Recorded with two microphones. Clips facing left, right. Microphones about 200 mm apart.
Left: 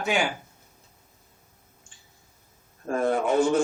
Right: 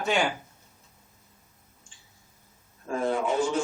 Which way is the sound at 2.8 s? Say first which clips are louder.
Left 3 dB; 55° left (ahead or behind).